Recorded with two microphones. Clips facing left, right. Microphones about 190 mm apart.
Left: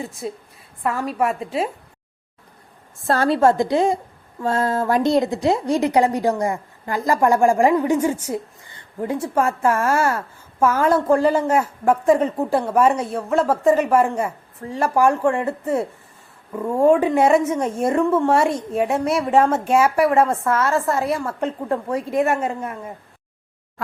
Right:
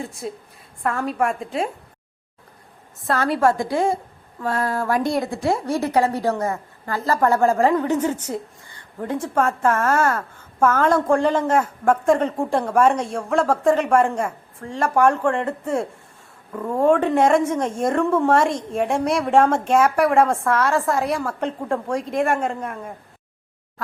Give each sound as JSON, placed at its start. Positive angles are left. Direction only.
{"t": 0.0, "sound": "speech", "side_deg": 0}
{"t": 3.1, "sound": "a woman's voice", "side_deg": 30}